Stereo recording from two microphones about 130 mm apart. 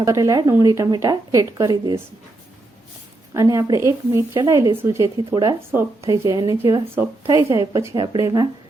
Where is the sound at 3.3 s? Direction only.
25° right (ahead or behind).